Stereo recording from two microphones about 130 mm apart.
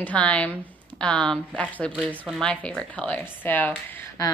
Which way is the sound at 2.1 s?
5° right (ahead or behind).